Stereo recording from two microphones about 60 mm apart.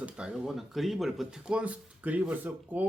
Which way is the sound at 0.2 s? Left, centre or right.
Centre.